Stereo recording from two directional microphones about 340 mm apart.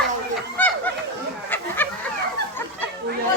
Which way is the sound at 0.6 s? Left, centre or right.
Centre.